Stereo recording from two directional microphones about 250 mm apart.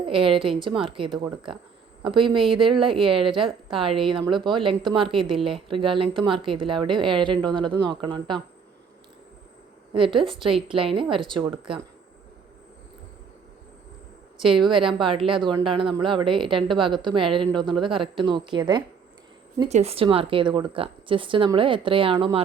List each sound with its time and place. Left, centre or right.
0.0 s speech: right
9.9 s speech: right
14.4 s speech: centre